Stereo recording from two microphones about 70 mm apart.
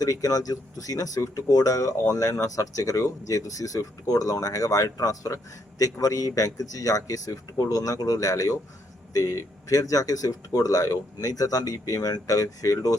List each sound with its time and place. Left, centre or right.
0.0 s speech: left